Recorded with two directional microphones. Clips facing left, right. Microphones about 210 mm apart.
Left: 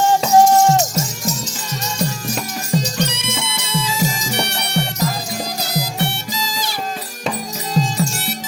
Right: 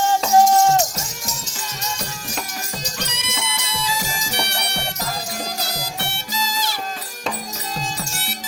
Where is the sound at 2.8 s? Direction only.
30° left (ahead or behind).